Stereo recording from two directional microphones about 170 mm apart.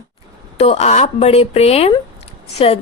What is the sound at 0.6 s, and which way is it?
A woman's voice, 40° left (ahead or behind).